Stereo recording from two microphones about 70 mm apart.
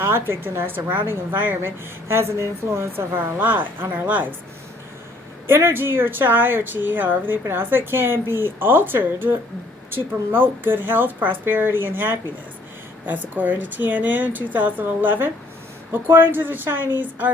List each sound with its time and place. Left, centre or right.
0.0 s a woman's voice: right
3.3 s speech: right
5.5 s a woman's voice: right